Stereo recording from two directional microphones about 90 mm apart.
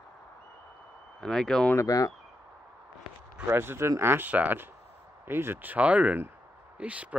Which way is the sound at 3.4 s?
25° right (ahead or behind).